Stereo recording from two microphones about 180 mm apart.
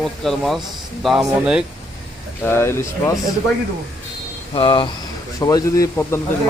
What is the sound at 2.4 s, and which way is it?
Speech, 15° left (ahead or behind).